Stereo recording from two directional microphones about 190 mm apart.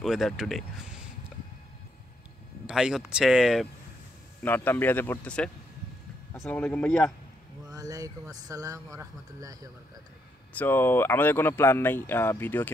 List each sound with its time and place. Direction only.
0.0 s speech: centre (ahead or behind)
2.6 s speech: 5° right (ahead or behind)
4.4 s speech: 10° left (ahead or behind)
7.7 s speech: 20° right (ahead or behind)
10.5 s speech: 10° left (ahead or behind)